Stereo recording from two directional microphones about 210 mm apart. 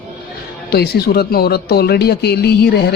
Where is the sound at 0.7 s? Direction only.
50° left (ahead or behind).